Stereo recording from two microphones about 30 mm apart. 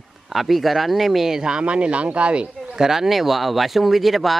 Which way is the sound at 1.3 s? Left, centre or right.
Right.